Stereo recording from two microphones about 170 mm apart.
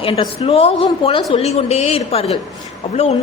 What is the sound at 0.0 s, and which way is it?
A woman's voice, 30° left (ahead or behind).